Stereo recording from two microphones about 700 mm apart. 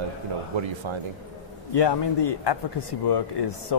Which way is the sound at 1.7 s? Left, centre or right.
Left.